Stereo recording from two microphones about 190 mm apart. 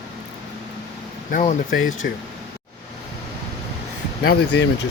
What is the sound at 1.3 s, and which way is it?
Speech, 40° left (ahead or behind).